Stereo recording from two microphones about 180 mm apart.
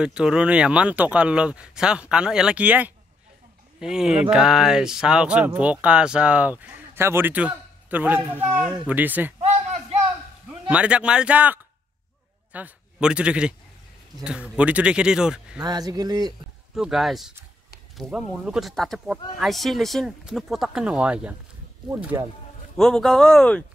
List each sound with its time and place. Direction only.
0.0 s speech: 5° right (ahead or behind)
9.4 s a sound: 35° right (ahead or behind)
10.7 s speech: 5° right (ahead or behind)
15.6 s speech: 20° right (ahead or behind)
16.7 s speech: centre (ahead or behind)
22.8 s speech: 5° left (ahead or behind)